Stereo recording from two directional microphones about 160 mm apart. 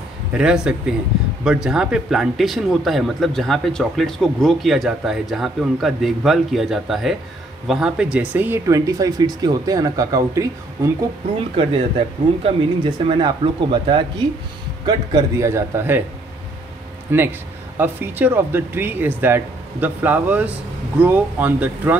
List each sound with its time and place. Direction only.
0.3 s speech: 5° right (ahead or behind)
11.3 s speech: 35° right (ahead or behind)
14.9 s speech: 20° right (ahead or behind)
17.7 s speech: 10° right (ahead or behind)